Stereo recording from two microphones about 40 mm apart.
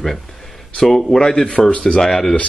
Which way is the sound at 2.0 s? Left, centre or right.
Centre.